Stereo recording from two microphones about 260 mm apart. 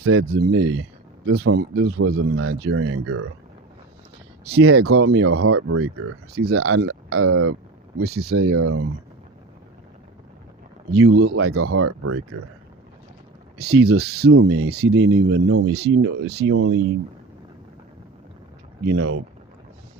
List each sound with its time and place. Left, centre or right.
0.0 s speech: right
4.6 s speech: right
8.0 s speech: right
8.4 s speech: right
10.9 s speech: right
13.8 s speech: right
14.3 s speech: right
15.7 s speech: right
16.5 s speech: right
18.9 s speech: right